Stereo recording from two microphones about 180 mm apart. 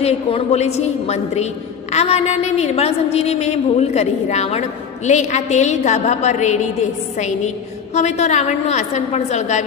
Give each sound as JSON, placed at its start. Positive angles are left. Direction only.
{"t": 0.0, "sound": "a woman's voice", "side_deg": 35}